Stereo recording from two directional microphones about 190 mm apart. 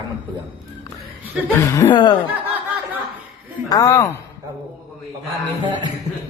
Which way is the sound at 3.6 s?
20° left (ahead or behind).